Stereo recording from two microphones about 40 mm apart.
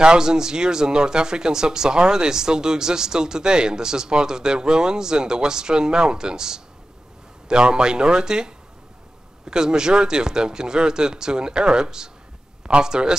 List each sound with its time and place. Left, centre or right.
0.0 s speech: centre